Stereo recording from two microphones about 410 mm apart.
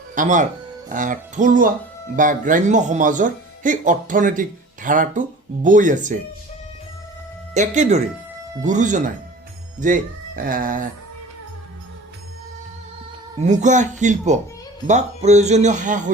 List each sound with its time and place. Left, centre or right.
0.1 s speech: centre
7.5 s speech: centre
13.4 s speech: centre